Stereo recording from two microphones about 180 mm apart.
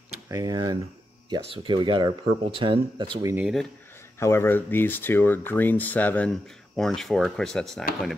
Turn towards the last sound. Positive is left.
turn(degrees=0)  # may be behind; listen again after turning